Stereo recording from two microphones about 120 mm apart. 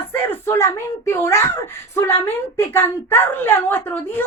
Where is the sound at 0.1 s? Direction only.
20° left (ahead or behind).